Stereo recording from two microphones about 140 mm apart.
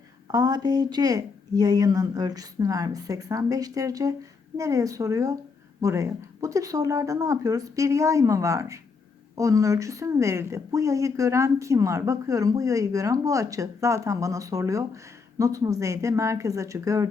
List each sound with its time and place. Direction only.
0.3 s speech: 25° right (ahead or behind)